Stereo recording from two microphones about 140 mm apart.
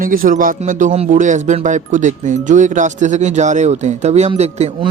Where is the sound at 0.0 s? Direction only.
90° right.